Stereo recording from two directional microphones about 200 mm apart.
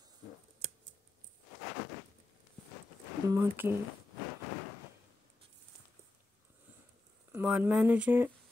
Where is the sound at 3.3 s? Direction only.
10° right (ahead or behind).